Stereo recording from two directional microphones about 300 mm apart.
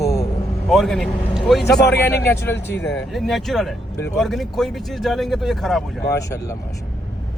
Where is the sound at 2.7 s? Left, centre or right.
Left.